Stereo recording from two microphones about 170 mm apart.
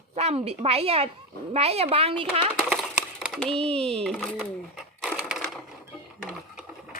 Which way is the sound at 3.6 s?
35° right (ahead or behind).